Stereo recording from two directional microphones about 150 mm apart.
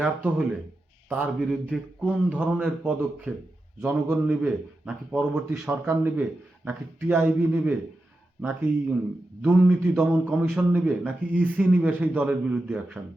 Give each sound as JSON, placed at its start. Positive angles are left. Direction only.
{"t": 0.0, "sound": "a man's voice", "side_deg": -10}
{"t": 5.9, "sound": "a man's voice", "side_deg": -15}
{"t": 9.4, "sound": "a man's voice", "side_deg": -10}